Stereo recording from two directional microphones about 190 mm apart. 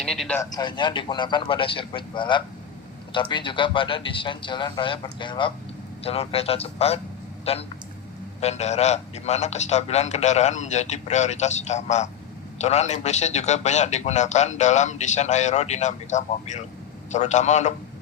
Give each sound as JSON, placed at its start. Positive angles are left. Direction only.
{"t": 0.0, "sound": "speech", "side_deg": 5}
{"t": 0.3, "sound": "a man's voice", "side_deg": 20}